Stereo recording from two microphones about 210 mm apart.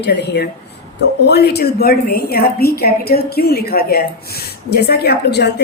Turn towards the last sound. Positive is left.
turn(degrees=55)  # may be behind; listen again after turning